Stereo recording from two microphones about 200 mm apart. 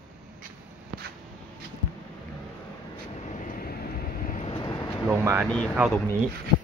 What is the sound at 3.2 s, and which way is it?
Vehicle, 40° left (ahead or behind).